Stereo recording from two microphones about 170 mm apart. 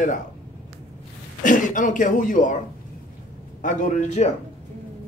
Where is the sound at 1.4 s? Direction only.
50° left (ahead or behind).